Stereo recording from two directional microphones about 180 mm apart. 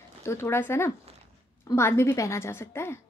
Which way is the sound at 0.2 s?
15° left (ahead or behind).